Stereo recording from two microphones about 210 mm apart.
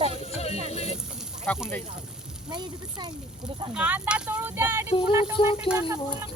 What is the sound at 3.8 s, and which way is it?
Speech, 5° right (ahead or behind).